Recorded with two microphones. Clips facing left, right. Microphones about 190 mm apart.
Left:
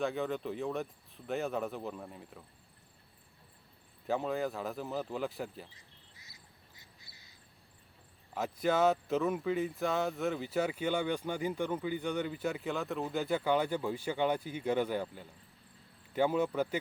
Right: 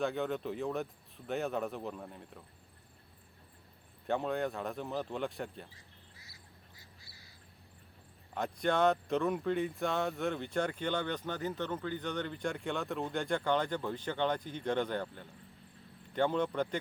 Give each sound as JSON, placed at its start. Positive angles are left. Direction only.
{"t": 0.0, "sound": "speech", "side_deg": 0}
{"t": 4.0, "sound": "speech", "side_deg": 0}
{"t": 6.1, "sound": "bird", "side_deg": 20}
{"t": 8.3, "sound": "speech", "side_deg": 5}